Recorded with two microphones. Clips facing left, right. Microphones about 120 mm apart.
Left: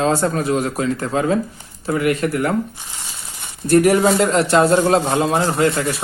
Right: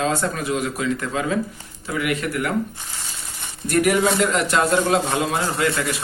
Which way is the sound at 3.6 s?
30° left (ahead or behind).